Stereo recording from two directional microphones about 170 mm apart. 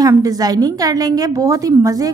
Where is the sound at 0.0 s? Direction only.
20° right (ahead or behind).